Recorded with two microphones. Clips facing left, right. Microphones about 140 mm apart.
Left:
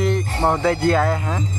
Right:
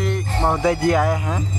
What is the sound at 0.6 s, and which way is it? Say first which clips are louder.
Speech: right 2 dB; 15° right (ahead or behind).